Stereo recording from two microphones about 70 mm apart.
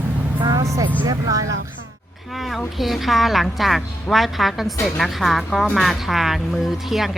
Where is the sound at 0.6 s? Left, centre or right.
Right.